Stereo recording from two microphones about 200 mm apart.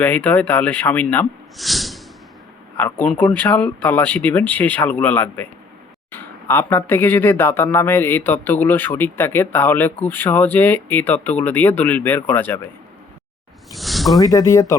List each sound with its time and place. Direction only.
0.0 s speech: 10° left (ahead or behind)
13.7 s a sound: centre (ahead or behind)
14.2 s speech: 20° left (ahead or behind)